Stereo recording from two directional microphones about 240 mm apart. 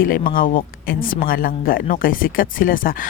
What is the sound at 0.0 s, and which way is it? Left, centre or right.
Speech, left.